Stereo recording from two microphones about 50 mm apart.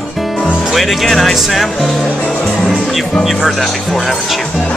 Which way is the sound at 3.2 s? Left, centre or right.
Centre.